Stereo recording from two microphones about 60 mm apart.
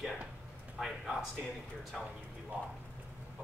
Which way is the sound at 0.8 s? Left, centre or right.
Centre.